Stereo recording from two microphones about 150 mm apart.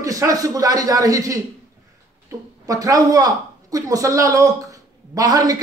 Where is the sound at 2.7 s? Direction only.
25° right (ahead or behind).